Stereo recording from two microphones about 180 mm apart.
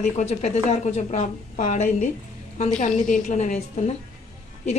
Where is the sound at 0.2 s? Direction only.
35° left (ahead or behind).